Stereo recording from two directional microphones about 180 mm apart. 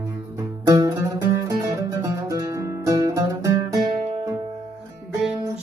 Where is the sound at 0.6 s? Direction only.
20° right (ahead or behind).